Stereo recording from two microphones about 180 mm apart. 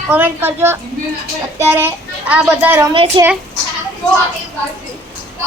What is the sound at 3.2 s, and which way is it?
Speech, 25° right (ahead or behind).